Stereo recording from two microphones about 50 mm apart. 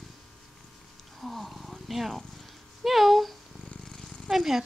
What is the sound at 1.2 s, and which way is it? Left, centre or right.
Speech, centre.